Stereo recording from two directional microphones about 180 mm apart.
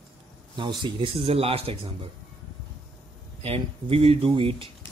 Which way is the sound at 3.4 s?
35° right (ahead or behind).